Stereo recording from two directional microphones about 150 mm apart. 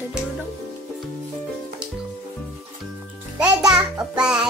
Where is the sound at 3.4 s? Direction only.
5° right (ahead or behind).